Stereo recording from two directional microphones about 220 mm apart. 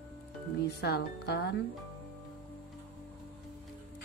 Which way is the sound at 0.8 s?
45° left (ahead or behind).